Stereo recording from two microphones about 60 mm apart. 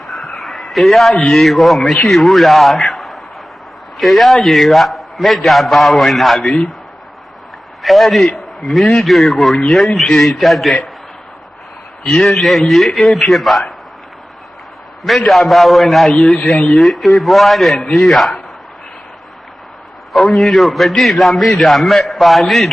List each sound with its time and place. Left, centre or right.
0.0 s a sound: centre
1.2 s a man's voice: centre
6.4 s a man's voice: centre
7.8 s a man's voice: centre
12.2 s a man's voice: centre
15.0 s a man's voice: centre
16.4 s speech: centre
16.7 s a man's voice: centre
20.1 s a man's voice: centre